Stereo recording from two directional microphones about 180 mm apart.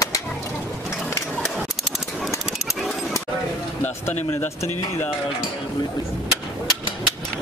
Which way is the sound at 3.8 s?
10° left (ahead or behind).